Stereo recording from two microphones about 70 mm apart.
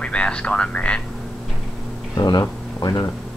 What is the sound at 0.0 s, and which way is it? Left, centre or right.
Speech, centre.